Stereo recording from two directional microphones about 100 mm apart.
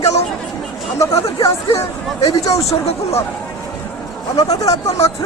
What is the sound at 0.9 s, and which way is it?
Speech, 30° left (ahead or behind).